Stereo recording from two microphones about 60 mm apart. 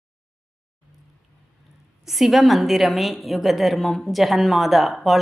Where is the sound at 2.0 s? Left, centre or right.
Centre.